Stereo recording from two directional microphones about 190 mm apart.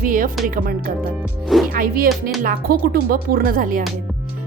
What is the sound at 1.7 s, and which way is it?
Speech, 50° right (ahead or behind).